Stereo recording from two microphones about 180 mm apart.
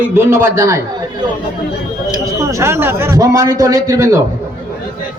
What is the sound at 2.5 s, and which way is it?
A man's voice, 15° right (ahead or behind).